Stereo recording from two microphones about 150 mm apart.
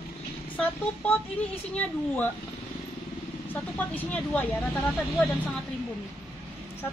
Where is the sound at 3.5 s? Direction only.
10° left (ahead or behind).